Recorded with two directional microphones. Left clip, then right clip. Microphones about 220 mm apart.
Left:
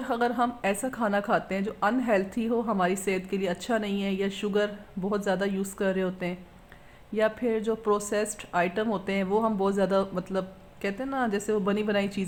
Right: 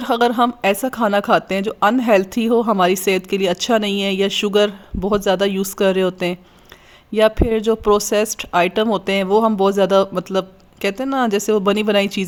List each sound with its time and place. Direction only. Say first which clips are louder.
0.0 s a woman's voice: right 11 dB; 50° right (ahead or behind)